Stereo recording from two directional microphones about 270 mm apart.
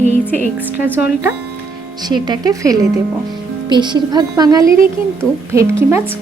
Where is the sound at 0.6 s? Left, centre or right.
Centre.